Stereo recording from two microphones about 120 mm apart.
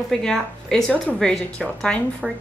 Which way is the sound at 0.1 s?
5° left (ahead or behind).